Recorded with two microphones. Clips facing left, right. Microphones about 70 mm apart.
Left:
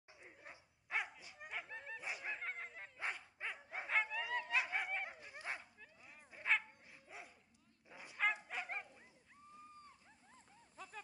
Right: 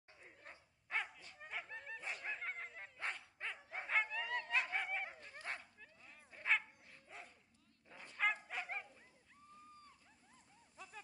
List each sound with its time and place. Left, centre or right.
0.1 s dog: centre
7.9 s bow-wow: centre
10.8 s a sound: left